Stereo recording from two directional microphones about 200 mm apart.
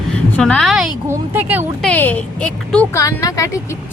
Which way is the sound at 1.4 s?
10° right (ahead or behind).